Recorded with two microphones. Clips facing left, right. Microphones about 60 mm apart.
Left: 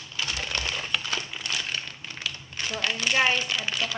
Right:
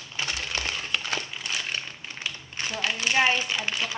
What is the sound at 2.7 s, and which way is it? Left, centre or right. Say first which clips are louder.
Speech: even; centre.